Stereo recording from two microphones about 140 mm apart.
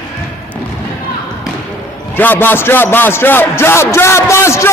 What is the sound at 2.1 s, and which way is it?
A man's voice, 15° left (ahead or behind).